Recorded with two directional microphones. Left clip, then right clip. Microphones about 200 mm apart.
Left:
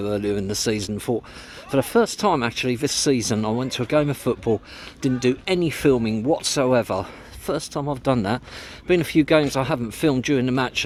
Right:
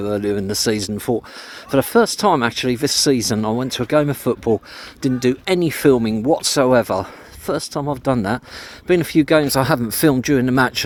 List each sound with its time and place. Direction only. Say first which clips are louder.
0.0 s speech: right 3 dB; 20° right (ahead or behind)